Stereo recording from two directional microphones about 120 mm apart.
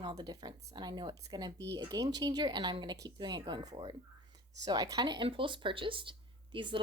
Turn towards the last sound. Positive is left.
turn(degrees=-45)  # may be behind; listen again after turning